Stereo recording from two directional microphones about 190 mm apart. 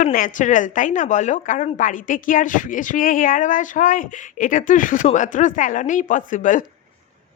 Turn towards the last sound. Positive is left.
turn(degrees=40)  # may be behind; listen again after turning